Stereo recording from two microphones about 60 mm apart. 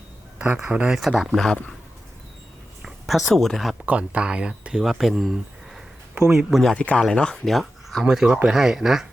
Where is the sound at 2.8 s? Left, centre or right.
Centre.